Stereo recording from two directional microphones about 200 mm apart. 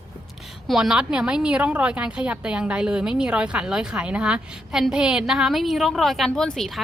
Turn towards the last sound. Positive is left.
turn(degrees=0)  # may be behind; listen again after turning